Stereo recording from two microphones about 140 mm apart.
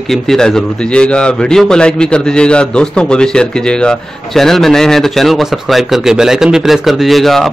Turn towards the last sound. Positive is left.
turn(degrees=0)  # may be behind; listen again after turning